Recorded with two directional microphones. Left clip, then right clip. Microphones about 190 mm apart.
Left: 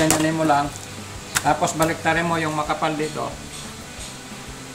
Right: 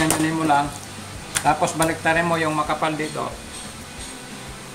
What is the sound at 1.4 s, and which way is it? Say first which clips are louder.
Speech: right 1 dB; 5° right (ahead or behind).